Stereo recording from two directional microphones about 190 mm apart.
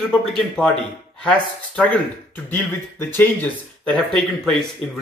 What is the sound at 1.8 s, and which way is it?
Speech, 10° left (ahead or behind).